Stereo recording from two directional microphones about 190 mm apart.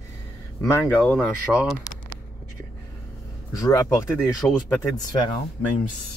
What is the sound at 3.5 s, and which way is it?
Speech, 15° left (ahead or behind).